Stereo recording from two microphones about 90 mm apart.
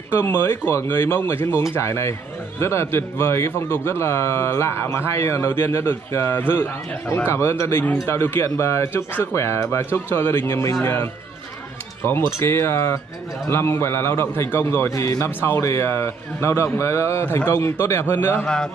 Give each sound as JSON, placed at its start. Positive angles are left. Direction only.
{"t": 0.1, "sound": "speech", "side_deg": 25}
{"t": 12.3, "sound": "speech", "side_deg": 30}